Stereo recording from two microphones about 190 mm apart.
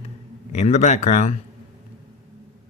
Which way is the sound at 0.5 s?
35° left (ahead or behind).